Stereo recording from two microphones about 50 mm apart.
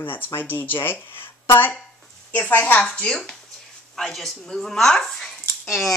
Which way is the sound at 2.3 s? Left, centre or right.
Left.